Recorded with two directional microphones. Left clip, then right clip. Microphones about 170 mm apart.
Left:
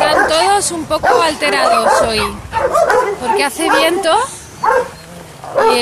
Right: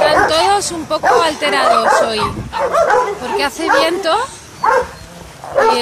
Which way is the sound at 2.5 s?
50° left (ahead or behind).